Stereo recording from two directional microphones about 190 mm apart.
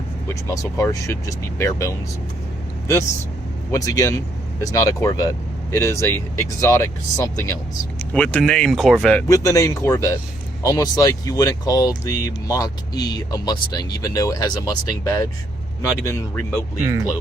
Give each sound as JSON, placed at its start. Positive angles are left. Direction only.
{"t": 0.5, "sound": "speech", "side_deg": 15}
{"t": 3.7, "sound": "speech", "side_deg": 20}
{"t": 9.2, "sound": "speech", "side_deg": 15}
{"t": 16.8, "sound": "speech", "side_deg": -15}